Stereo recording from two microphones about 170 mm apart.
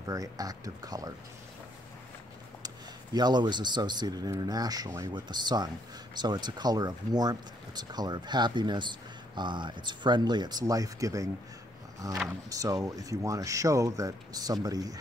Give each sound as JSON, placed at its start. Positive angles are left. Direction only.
{"t": 0.0, "sound": "speech", "side_deg": -20}
{"t": 2.6, "sound": "speech", "side_deg": -25}